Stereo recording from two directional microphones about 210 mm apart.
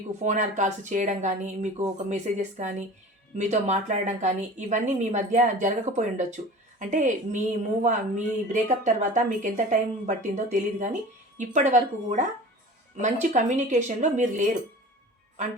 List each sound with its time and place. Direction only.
0.2 s a woman's voice: 35° right (ahead or behind)